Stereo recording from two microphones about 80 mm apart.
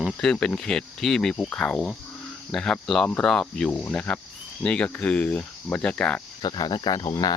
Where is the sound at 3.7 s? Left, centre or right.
Centre.